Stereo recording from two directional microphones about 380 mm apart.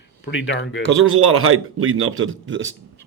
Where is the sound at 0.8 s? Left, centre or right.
Right.